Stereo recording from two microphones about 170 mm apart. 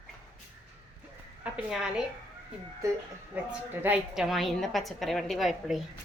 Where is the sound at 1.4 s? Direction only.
5° right (ahead or behind).